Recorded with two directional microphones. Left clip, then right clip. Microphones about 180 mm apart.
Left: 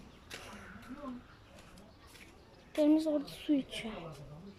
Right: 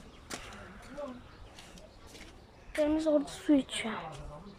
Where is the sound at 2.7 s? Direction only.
20° left (ahead or behind).